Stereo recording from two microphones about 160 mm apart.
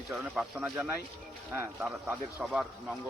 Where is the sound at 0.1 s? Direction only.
5° right (ahead or behind).